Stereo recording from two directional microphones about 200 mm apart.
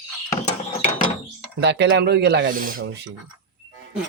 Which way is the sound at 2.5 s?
45° right (ahead or behind).